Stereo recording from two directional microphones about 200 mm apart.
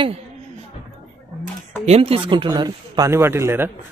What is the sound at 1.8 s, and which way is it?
A man's voice, 30° right (ahead or behind).